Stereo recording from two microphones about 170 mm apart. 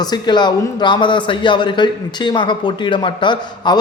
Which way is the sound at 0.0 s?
25° left (ahead or behind).